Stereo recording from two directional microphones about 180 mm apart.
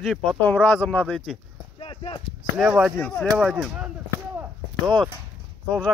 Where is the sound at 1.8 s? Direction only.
30° left (ahead or behind).